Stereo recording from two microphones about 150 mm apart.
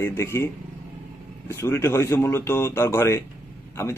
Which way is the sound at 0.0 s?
20° left (ahead or behind).